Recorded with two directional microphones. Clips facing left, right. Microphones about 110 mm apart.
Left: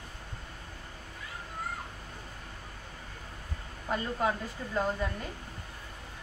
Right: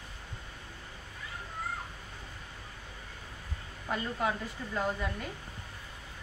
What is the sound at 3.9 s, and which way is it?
Speech, 20° left (ahead or behind).